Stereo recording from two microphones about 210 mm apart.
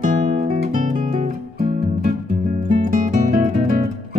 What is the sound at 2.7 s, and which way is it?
Music, 35° right (ahead or behind).